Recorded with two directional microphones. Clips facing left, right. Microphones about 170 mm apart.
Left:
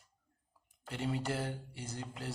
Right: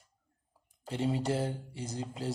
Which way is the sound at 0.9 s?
25° right (ahead or behind).